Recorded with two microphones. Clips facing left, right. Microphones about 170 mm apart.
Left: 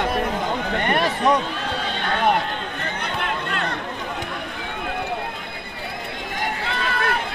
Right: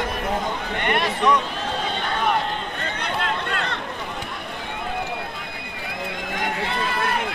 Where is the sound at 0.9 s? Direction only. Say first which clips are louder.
Even; 40° left (ahead or behind).